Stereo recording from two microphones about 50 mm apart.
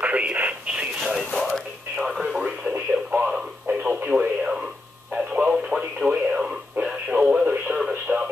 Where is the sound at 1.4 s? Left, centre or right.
Centre.